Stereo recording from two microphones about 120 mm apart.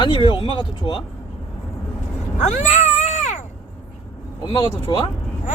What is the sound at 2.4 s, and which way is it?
Cat, 75° left (ahead or behind).